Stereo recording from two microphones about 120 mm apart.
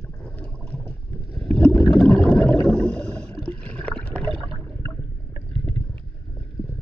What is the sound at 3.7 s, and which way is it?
Water, 10° left (ahead or behind).